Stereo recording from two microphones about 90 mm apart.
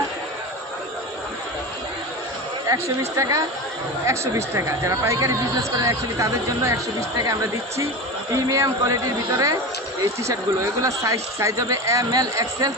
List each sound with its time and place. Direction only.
2.6 s speech: 35° right (ahead or behind)
8.3 s speech: 40° right (ahead or behind)